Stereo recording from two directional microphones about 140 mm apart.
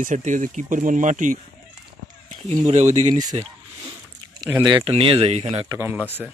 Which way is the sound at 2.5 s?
50° right (ahead or behind).